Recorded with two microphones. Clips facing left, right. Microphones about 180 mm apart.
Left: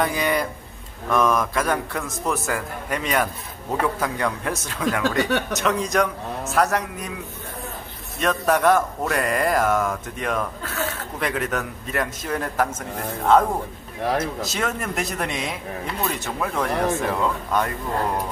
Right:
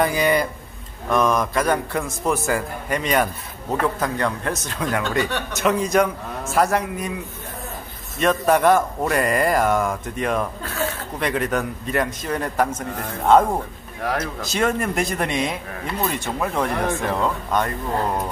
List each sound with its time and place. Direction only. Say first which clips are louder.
0.0 s a man's voice: right 3 dB; centre (ahead or behind)
8.2 s a man's voice: right 3 dB; centre (ahead or behind)
14.1 s speech: left 3 dB; 25° left (ahead or behind)
14.5 s a man's voice: right 5 dB; centre (ahead or behind)